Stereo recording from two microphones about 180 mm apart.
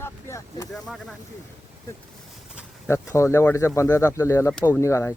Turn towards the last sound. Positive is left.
turn(degrees=15)  # may be behind; listen again after turning